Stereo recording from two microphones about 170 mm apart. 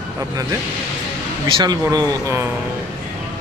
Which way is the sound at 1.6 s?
20° right (ahead or behind).